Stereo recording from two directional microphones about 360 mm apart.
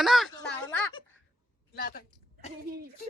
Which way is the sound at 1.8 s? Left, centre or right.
Left.